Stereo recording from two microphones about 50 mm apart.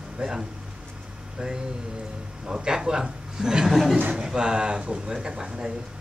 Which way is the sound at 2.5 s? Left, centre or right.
Centre.